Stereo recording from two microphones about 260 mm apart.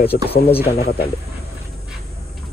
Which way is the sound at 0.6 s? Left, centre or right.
Left.